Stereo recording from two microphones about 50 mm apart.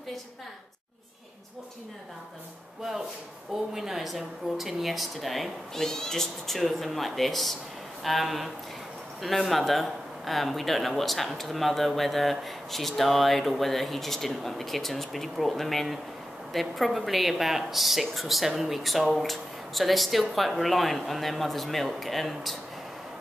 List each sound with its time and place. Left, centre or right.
3.7 s speech: centre
5.8 s speech: centre